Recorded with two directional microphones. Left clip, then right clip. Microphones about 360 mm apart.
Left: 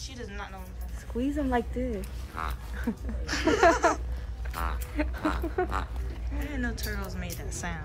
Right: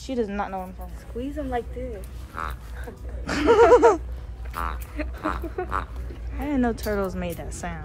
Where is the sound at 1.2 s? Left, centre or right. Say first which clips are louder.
Even; left.